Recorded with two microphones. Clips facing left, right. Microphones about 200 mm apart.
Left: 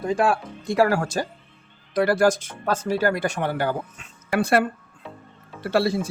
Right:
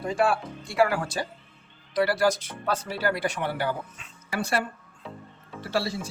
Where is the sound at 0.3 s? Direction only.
40° left (ahead or behind).